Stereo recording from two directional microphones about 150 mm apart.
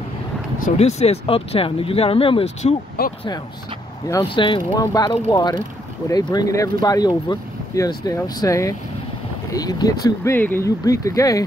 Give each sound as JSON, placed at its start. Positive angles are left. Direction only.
{"t": 0.7, "sound": "speech", "side_deg": 45}
{"t": 3.0, "sound": "speech", "side_deg": 90}
{"t": 4.2, "sound": "speech", "side_deg": 35}